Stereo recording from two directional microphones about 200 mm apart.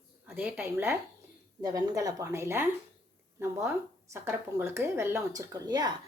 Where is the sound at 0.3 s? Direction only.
5° right (ahead or behind).